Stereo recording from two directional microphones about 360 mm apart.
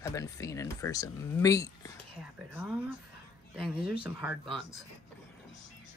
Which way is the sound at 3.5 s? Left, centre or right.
Centre.